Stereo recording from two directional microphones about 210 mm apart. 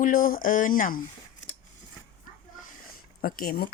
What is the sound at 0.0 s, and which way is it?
Speech, 40° left (ahead or behind).